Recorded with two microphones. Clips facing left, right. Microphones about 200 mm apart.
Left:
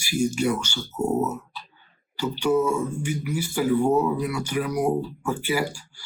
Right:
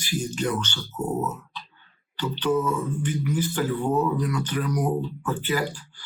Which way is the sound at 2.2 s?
10° left (ahead or behind).